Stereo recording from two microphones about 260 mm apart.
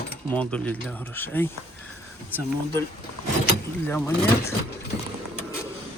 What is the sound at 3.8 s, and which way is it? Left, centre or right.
Speech, centre.